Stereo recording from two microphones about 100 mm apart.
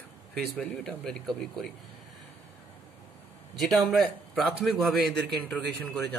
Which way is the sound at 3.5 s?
Centre (ahead or behind).